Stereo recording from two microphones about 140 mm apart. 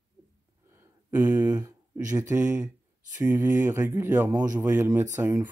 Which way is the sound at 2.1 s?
25° right (ahead or behind).